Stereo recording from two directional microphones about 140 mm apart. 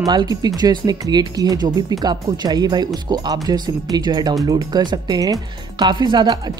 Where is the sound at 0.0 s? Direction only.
30° right (ahead or behind).